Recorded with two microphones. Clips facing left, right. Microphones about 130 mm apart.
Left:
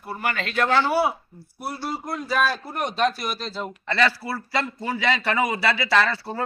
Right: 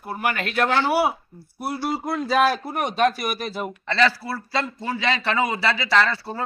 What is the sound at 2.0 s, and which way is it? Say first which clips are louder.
Speech: right 5 dB; 70° right (ahead or behind).